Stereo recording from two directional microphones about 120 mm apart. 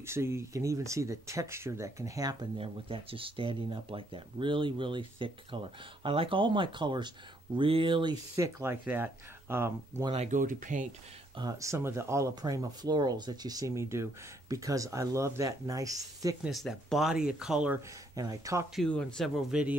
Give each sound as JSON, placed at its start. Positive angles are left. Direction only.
{"t": 0.0, "sound": "speech", "side_deg": -20}
{"t": 2.5, "sound": "speech", "side_deg": -50}
{"t": 8.4, "sound": "speech", "side_deg": -25}
{"t": 10.1, "sound": "speech", "side_deg": -80}
{"t": 11.3, "sound": "speech", "side_deg": -30}
{"t": 16.4, "sound": "speech", "side_deg": 0}
{"t": 18.1, "sound": "speech", "side_deg": -30}
{"t": 18.8, "sound": "speech", "side_deg": 10}